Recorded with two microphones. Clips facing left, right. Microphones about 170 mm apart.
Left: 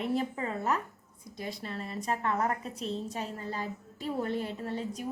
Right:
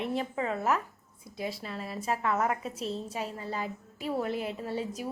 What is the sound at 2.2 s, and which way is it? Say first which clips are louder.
Speech: right 2 dB; 40° left (ahead or behind).